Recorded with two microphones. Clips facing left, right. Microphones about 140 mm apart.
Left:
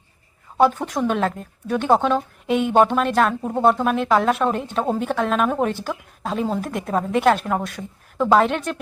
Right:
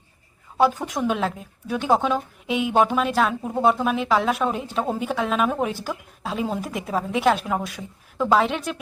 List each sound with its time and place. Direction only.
0.9 s a woman's voice: 5° right (ahead or behind)